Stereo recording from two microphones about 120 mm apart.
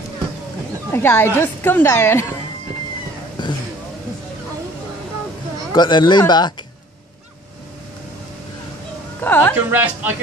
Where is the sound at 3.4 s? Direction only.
40° left (ahead or behind).